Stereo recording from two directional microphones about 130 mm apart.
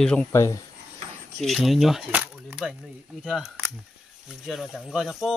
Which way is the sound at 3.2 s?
Centre (ahead or behind).